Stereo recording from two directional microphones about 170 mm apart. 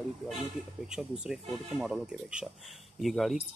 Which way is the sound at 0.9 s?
Centre (ahead or behind).